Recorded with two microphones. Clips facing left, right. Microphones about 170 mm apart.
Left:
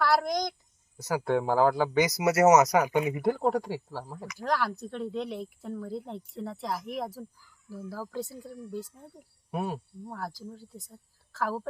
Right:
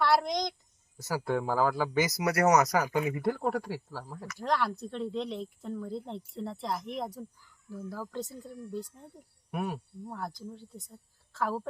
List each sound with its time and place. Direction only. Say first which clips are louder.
0.0 s a sound: left 1 dB; centre (ahead or behind)
1.1 s speech: left 4 dB; 20° left (ahead or behind)
4.4 s speech: left 1 dB; centre (ahead or behind)
9.5 s speech: left 2 dB; 25° left (ahead or behind)
10.1 s speech: left 1 dB; centre (ahead or behind)